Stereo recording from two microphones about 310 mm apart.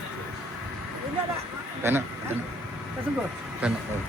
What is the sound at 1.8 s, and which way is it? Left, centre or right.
Speech, centre.